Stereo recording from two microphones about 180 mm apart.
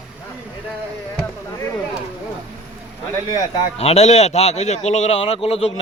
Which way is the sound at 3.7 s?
35° left (ahead or behind).